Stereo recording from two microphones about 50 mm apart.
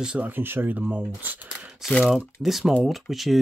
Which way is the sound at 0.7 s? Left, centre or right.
Right.